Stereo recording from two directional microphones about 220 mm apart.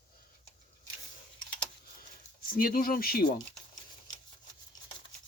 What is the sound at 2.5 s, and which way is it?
Speech, 40° left (ahead or behind).